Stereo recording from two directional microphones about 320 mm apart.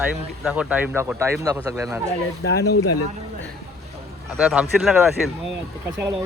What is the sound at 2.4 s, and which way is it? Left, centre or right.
Speech, left.